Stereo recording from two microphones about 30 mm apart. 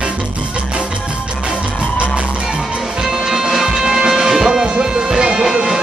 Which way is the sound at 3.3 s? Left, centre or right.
Centre.